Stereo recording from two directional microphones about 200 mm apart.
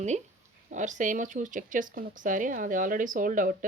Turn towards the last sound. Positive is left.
turn(degrees=-40)  # may be behind; listen again after turning